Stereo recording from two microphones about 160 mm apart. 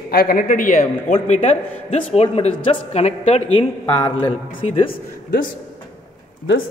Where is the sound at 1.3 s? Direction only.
45° left (ahead or behind).